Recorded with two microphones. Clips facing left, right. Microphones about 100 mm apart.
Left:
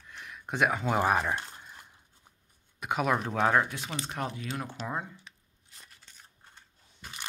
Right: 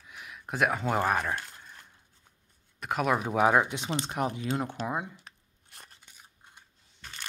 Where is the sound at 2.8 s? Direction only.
Centre (ahead or behind); by 5.1 s 15° right (ahead or behind).